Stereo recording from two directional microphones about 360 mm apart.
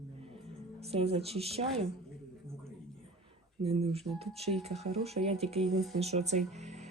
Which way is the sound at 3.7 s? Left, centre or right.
Centre.